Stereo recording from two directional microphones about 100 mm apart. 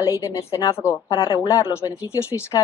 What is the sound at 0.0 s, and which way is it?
Speech, 35° left (ahead or behind).